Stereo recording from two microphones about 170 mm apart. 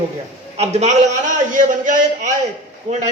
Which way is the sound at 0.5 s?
40° right (ahead or behind).